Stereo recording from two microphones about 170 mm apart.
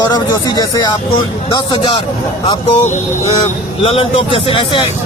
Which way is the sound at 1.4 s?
30° left (ahead or behind).